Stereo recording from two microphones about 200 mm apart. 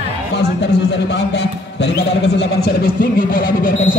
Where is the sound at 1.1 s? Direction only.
60° left (ahead or behind).